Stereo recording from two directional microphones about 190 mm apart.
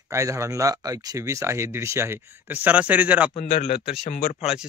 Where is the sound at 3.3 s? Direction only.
40° left (ahead or behind).